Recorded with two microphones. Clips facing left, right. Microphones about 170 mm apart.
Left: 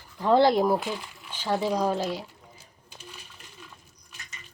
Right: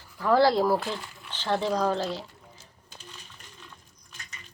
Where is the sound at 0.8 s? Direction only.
5° left (ahead or behind).